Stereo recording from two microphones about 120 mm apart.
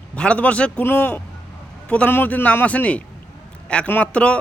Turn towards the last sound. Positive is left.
turn(degrees=10)  # may be behind; listen again after turning